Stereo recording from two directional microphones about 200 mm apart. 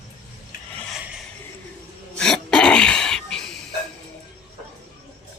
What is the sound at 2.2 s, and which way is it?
Throat clearing, 5° left (ahead or behind).